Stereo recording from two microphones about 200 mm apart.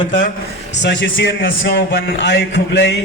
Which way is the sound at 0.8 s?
65° left (ahead or behind).